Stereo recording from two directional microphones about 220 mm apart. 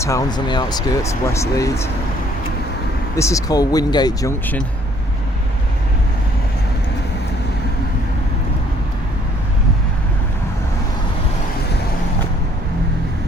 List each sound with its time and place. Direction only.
0.0 s speech: 15° left (ahead or behind)
3.2 s speech: 15° left (ahead or behind)